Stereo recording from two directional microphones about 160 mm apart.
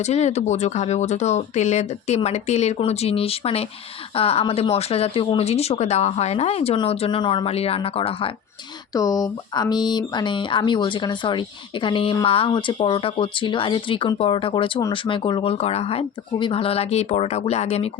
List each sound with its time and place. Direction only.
0.0 s speech: 45° left (ahead or behind)
8.9 s speech: 20° left (ahead or behind); by 17.8 s 40° left (ahead or behind)